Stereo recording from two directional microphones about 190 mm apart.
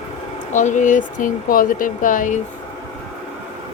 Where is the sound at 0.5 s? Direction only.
40° left (ahead or behind).